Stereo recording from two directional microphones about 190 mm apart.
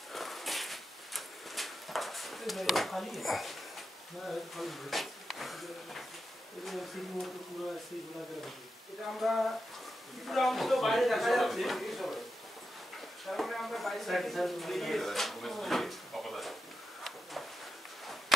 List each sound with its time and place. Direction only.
0.1 s a sound: centre (ahead or behind)
4.3 s speech: centre (ahead or behind)
9.2 s speech: centre (ahead or behind)
13.2 s speech: centre (ahead or behind)